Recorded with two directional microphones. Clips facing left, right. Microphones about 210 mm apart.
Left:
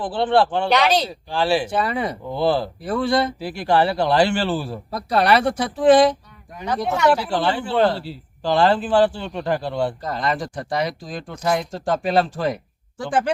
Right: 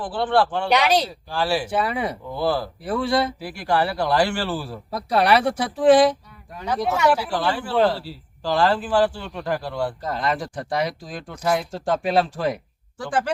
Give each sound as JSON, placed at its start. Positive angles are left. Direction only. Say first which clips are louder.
{"t": 0.0, "sound": "speech", "louder": "left 2 dB", "side_deg": 25}
{"t": 0.7, "sound": "speech", "louder": "left 1 dB", "side_deg": -10}
{"t": 1.3, "sound": "speech", "louder": "left 4 dB", "side_deg": 25}
{"t": 1.7, "sound": "speech", "louder": "left 1 dB", "side_deg": -5}
{"t": 2.3, "sound": "speech", "louder": "left 4 dB", "side_deg": 25}
{"t": 2.8, "sound": "speech", "louder": "left 1 dB", "side_deg": -5}
{"t": 3.4, "sound": "speech", "louder": "left 4 dB", "side_deg": 25}
{"t": 4.9, "sound": "speech", "louder": "even", "side_deg": -5}
{"t": 7.3, "sound": "speech", "louder": "left 2 dB", "side_deg": 25}
{"t": 10.0, "sound": "speech", "louder": "left 1 dB", "side_deg": -5}
{"t": 13.0, "sound": "speech", "louder": "left 3 dB", "side_deg": 20}